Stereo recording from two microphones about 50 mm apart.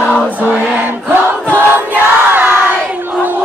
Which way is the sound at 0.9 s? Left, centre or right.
Right.